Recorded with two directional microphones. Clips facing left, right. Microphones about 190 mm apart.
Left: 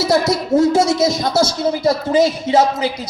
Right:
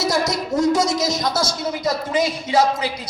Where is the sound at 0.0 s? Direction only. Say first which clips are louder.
Left 5 dB; 25° left (ahead or behind).